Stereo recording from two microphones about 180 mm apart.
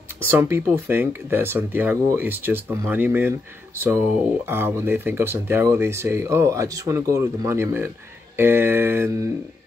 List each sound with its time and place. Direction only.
0.2 s speech: 15° right (ahead or behind)